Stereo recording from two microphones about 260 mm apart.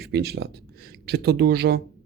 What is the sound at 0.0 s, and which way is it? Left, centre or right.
Speech, right.